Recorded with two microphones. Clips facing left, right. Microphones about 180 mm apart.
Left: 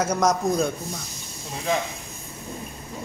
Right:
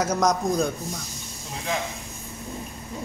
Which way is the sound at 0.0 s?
Centre (ahead or behind).